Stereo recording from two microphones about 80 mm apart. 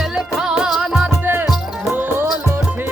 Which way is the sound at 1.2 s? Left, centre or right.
Right.